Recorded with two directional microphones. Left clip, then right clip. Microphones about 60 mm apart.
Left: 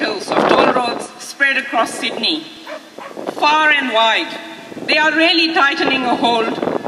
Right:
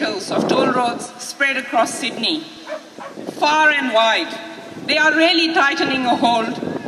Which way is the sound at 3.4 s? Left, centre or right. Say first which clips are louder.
Left 2 dB; right.